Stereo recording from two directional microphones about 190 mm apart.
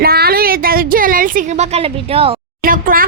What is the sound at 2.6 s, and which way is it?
Speech, 45° right (ahead or behind).